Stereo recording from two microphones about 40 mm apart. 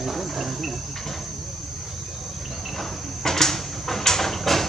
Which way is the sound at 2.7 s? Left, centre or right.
Centre.